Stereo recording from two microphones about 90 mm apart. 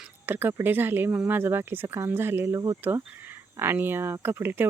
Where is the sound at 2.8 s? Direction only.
25° right (ahead or behind).